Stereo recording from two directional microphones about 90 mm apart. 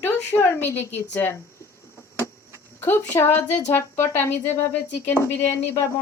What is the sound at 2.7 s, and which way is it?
Speech, 25° left (ahead or behind).